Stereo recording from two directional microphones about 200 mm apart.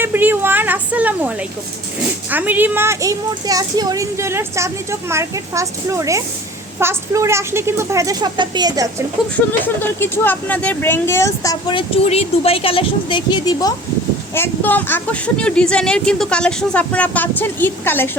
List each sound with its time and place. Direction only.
0.0 s a sound: 10° right (ahead or behind)
2.3 s a woman's voice: 10° right (ahead or behind)
9.8 s speech: 10° left (ahead or behind)